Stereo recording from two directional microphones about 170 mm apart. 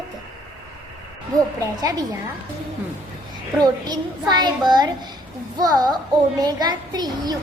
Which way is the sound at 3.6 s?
25° right (ahead or behind).